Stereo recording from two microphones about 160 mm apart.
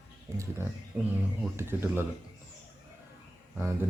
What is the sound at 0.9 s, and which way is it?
Speech, 15° right (ahead or behind).